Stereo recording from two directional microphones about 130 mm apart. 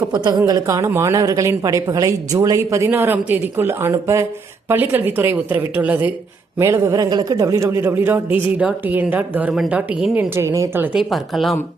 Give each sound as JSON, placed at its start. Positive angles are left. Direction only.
{"t": 0.1, "sound": "a woman's voice", "side_deg": -35}
{"t": 10.3, "sound": "a woman's voice", "side_deg": -20}
{"t": 10.9, "sound": "speech", "side_deg": 0}